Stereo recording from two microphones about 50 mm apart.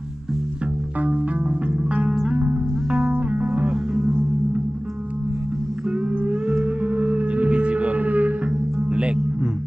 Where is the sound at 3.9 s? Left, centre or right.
Centre.